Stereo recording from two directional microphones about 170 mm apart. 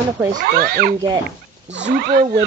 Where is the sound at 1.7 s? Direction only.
90° right; by 2.2 s 65° right (ahead or behind).